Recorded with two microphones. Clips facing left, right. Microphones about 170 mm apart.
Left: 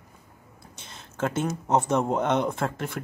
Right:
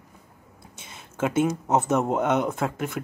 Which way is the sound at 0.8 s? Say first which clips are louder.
Right 2 dB; 5° right (ahead or behind).